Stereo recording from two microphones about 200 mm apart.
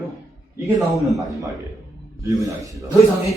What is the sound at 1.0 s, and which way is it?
Speech, centre (ahead or behind).